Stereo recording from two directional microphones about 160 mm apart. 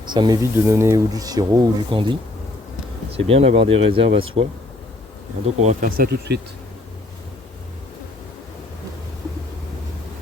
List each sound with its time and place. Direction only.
0.1 s speech: 30° right (ahead or behind)
0.5 s speech: 15° right (ahead or behind); by 4.3 s 35° right (ahead or behind)
5.5 s speech: 45° right (ahead or behind)
6.0 s speech: 90° right